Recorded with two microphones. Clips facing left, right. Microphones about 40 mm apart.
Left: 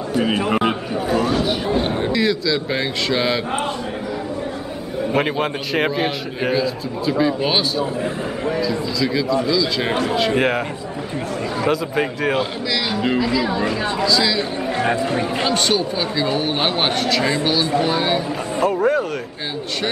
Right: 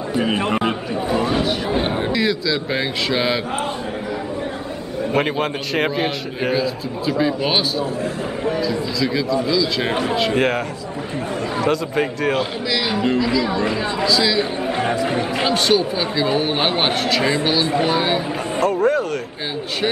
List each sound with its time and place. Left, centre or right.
0.5 s a sound: centre
1.1 s a sound: centre
1.7 s a man's voice: centre
5.1 s a man's voice: centre
11.6 s a man's voice: centre
18.6 s a man's voice: centre